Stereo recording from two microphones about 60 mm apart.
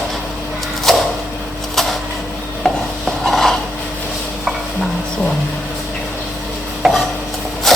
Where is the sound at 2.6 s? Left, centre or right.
Centre.